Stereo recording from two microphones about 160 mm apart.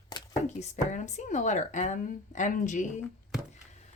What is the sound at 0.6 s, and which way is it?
Speech, 45° left (ahead or behind).